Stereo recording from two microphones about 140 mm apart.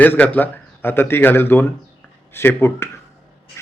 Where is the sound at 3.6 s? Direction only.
20° left (ahead or behind).